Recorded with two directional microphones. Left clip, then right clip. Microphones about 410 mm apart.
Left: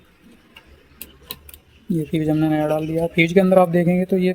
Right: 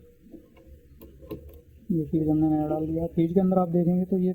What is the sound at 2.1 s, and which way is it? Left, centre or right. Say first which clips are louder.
Speech: left 4 dB; left.